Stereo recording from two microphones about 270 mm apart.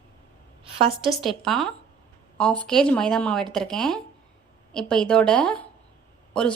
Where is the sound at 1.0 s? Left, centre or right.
Centre.